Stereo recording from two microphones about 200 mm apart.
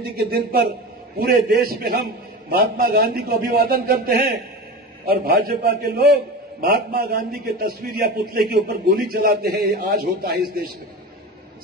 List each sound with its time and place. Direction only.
0.0 s a man's voice: 50° right (ahead or behind)